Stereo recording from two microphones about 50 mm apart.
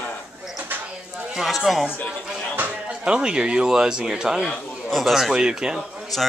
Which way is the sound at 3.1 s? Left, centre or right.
Centre.